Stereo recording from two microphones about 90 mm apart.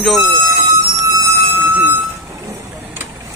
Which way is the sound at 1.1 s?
35° right (ahead or behind).